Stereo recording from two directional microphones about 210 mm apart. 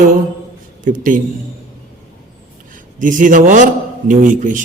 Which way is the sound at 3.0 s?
40° right (ahead or behind).